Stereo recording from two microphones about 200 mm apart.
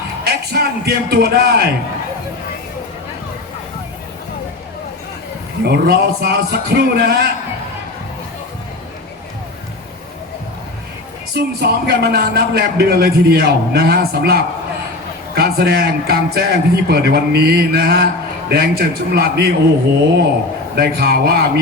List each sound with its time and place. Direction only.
0.3 s a man's voice: 55° right (ahead or behind)
5.6 s a man's voice: 55° right (ahead or behind)
11.3 s a man's voice: 55° right (ahead or behind)
20.7 s a man's voice: 50° right (ahead or behind)